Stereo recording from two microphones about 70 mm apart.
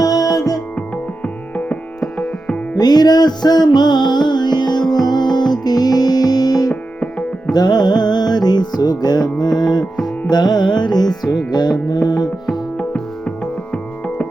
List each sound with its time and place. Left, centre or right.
0.0 s music: left
0.8 s music: centre
2.7 s music: left
7.0 s music: centre
7.5 s music: left
12.7 s music: centre